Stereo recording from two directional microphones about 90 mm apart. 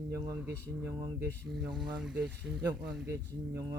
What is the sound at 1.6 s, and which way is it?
Speech, centre (ahead or behind).